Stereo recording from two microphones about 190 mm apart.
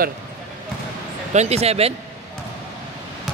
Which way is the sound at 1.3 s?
35° right (ahead or behind).